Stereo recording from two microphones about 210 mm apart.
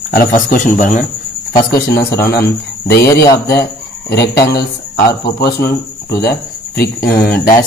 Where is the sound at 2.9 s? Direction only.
15° left (ahead or behind).